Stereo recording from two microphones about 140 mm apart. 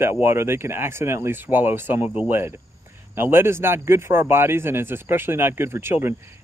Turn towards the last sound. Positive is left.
turn(degrees=-15)  # may be behind; listen again after turning